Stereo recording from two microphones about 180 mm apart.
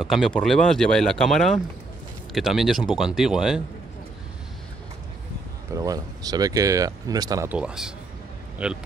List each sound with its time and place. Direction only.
0.0 s speech: centre (ahead or behind)
5.7 s speech: 20° right (ahead or behind)
7.4 s speech: 5° right (ahead or behind)